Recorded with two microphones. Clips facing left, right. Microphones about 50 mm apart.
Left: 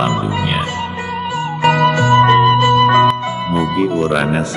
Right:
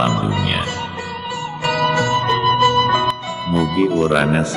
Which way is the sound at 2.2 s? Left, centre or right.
Left.